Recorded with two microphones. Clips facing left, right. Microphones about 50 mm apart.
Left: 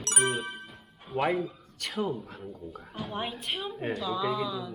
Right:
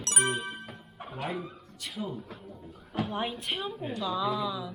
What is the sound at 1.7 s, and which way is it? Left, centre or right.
Speech, left.